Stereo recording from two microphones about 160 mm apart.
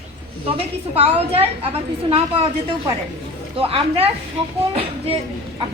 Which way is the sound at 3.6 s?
35° right (ahead or behind).